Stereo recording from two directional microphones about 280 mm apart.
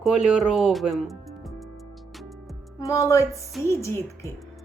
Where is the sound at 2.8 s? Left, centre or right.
Centre.